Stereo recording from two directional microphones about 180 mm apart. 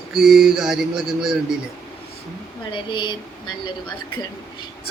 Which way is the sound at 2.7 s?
25° left (ahead or behind).